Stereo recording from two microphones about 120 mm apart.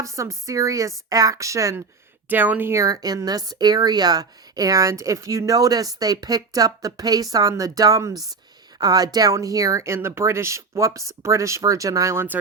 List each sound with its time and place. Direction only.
0.0 s speech: 25° right (ahead or behind)
2.3 s a woman's voice: 15° right (ahead or behind)